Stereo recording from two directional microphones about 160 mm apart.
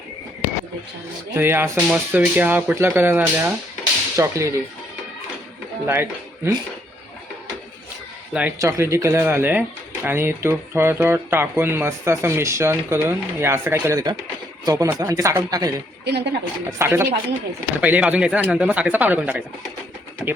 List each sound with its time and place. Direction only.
1.4 s speech: 15° right (ahead or behind)
5.8 s speech: 15° right (ahead or behind)
8.3 s speech: 10° right (ahead or behind)
16.0 s a woman's voice: 90° right
16.7 s speech: 15° right (ahead or behind)